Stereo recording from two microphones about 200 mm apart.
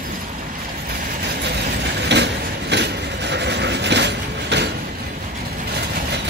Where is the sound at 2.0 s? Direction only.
60° right (ahead or behind).